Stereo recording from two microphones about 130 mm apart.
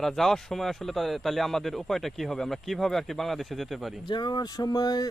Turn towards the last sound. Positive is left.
turn(degrees=30)  # may be behind; listen again after turning